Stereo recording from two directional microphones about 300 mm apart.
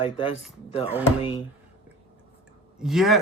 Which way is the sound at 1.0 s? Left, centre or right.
Centre.